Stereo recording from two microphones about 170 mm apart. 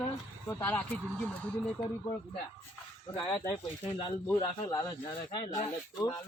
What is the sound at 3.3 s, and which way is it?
Speech, 25° left (ahead or behind).